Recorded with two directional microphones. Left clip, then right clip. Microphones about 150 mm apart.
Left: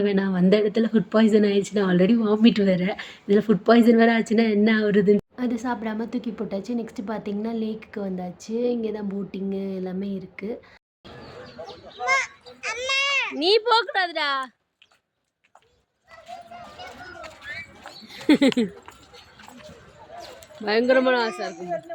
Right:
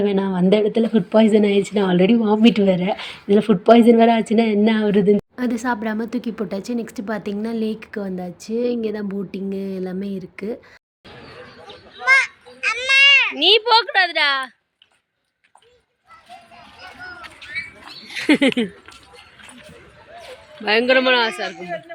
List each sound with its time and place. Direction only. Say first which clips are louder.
0.0 s speech: right 3 dB; 5° right (ahead or behind)
5.4 s a woman's voice: right 5 dB; 20° right (ahead or behind)
12.0 s a sound: right 8 dB; 10° left (ahead or behind)
17.5 s rodents: right 10 dB; centre (ahead or behind)
20.7 s a man's voice: right 4 dB; 5° left (ahead or behind)